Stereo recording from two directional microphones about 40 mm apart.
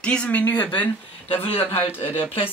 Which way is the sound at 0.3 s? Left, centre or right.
Left.